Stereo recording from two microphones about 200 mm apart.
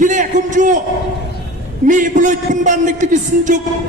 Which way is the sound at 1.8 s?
40° right (ahead or behind).